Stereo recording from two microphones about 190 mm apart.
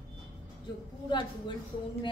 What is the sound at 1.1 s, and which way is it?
Speech, 25° left (ahead or behind).